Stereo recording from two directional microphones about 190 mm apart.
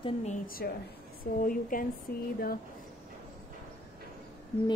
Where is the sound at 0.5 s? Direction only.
50° left (ahead or behind).